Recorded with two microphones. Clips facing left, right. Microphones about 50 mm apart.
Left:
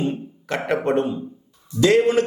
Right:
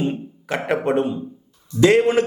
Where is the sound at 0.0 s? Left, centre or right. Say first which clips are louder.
Right 1 dB; centre.